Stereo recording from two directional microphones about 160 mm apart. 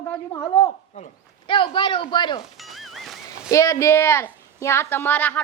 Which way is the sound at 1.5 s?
30° left (ahead or behind).